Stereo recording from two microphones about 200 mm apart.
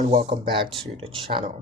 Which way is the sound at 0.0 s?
35° right (ahead or behind).